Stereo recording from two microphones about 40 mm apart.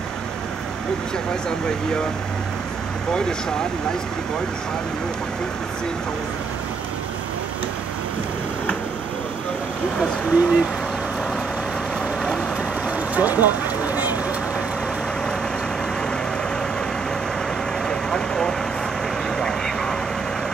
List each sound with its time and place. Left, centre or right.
1.7 s speech: centre
3.1 s speech: centre
10.3 s speech: right
12.4 s vehicle: right
17.8 s vehicle: centre